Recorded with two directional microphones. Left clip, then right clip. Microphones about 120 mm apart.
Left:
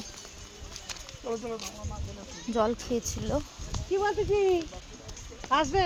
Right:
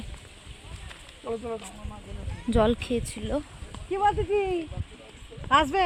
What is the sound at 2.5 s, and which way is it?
Speech, 75° right (ahead or behind).